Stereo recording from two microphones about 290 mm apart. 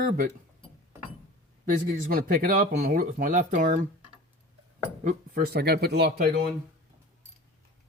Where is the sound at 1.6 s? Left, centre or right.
Right.